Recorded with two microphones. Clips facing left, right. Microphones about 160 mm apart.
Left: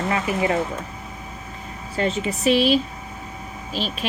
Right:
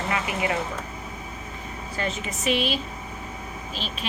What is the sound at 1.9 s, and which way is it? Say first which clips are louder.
A woman's voice: left 7 dB; 35° left (ahead or behind).